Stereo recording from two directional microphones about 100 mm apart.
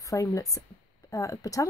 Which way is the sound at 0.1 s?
35° left (ahead or behind).